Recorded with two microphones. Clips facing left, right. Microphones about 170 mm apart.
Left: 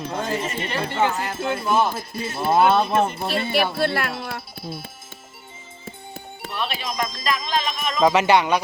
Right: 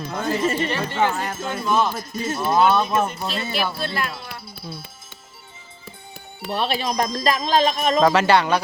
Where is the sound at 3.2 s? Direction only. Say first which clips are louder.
Left 3 dB; 65° left (ahead or behind).